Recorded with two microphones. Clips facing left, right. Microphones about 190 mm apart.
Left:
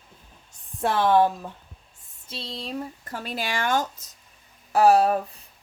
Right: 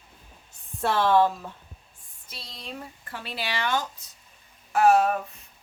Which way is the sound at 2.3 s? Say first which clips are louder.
Left 7 dB; 30° left (ahead or behind).